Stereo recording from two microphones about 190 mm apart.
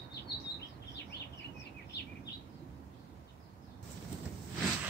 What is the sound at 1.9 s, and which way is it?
Bird, 60° left (ahead or behind).